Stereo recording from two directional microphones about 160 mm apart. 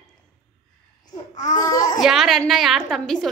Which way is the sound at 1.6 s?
20° left (ahead or behind).